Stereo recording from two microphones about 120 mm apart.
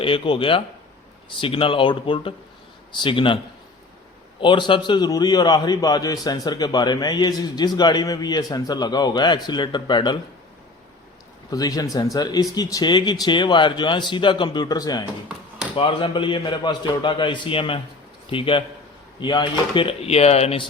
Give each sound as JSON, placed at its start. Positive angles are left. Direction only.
{"t": 0.0, "sound": "a man's voice", "side_deg": 45}
{"t": 4.4, "sound": "a man's voice", "side_deg": 40}
{"t": 11.5, "sound": "a man's voice", "side_deg": 30}
{"t": 15.7, "sound": "a man's voice", "side_deg": 45}